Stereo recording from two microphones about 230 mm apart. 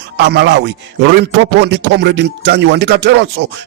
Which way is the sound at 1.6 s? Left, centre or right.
Right.